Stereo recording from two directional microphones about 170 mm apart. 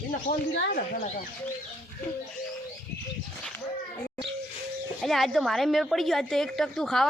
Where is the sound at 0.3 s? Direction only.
50° left (ahead or behind).